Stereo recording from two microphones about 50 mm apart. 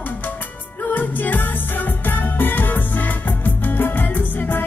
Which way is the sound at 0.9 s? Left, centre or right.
Left.